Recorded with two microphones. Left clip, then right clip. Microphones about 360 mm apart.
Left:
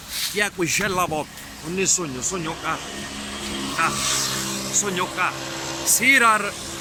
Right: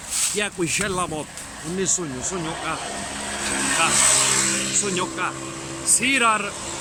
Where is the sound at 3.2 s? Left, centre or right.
Right.